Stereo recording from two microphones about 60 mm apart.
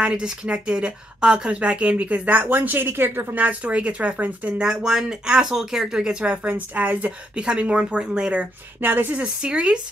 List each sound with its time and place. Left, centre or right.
0.0 s a woman's voice: centre; by 3.3 s right
3.3 s a woman's voice: right
4.6 s speech: centre
6.3 s a woman's voice: right
8.8 s speech: right
9.4 s speech: centre